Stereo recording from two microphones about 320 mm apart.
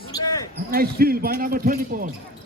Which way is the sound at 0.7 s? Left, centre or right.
Right.